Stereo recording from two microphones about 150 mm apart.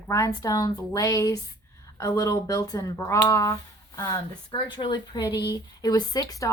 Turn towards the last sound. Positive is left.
turn(degrees=25)  # may be behind; listen again after turning